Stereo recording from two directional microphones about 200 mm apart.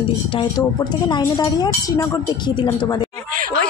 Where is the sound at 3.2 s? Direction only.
40° right (ahead or behind).